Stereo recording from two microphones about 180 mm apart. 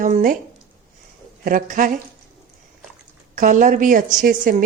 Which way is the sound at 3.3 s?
45° right (ahead or behind).